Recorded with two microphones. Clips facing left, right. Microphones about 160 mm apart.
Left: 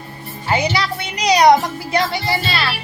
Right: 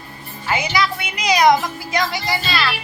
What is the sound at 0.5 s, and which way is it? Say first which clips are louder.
A woman's voice: left 2 dB; 35° left (ahead or behind).